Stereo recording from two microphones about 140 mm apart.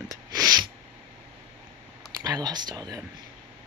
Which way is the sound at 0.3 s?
30° right (ahead or behind).